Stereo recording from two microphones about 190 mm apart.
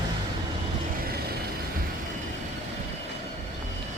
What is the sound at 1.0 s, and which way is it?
Vehicle, 55° right (ahead or behind).